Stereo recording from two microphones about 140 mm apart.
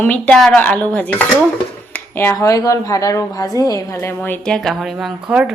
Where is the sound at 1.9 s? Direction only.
15° left (ahead or behind).